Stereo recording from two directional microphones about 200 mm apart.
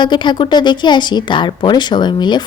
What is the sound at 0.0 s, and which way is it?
Speech, 25° left (ahead or behind).